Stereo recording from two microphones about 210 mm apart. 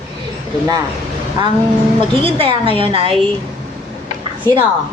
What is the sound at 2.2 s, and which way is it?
Speech, 25° right (ahead or behind).